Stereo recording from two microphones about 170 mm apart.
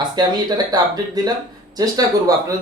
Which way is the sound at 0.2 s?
25° right (ahead or behind).